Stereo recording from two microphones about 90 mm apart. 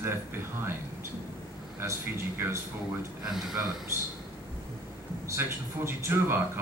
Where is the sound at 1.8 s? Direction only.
25° right (ahead or behind).